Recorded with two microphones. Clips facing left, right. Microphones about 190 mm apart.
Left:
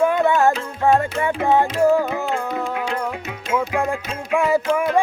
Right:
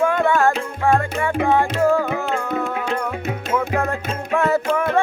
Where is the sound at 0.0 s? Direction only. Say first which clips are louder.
Left 1 dB; 20° left (ahead or behind).